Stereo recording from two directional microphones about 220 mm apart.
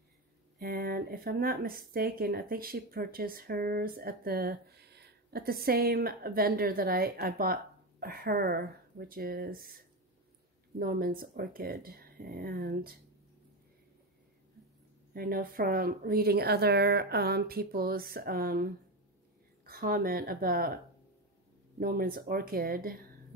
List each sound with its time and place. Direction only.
0.6 s speech: 40° right (ahead or behind)
10.8 s speech: 40° right (ahead or behind)
15.1 s speech: 40° right (ahead or behind)